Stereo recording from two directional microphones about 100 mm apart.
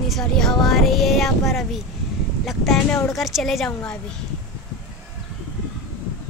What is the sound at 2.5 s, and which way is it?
Speech, centre (ahead or behind).